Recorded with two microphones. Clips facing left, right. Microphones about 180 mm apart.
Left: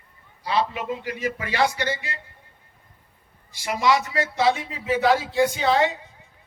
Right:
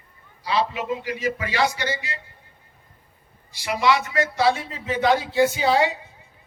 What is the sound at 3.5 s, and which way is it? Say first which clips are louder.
Speech: even; 50° left (ahead or behind).